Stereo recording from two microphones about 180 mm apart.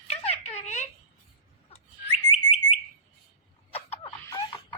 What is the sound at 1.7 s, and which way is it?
Bird, 35° left (ahead or behind).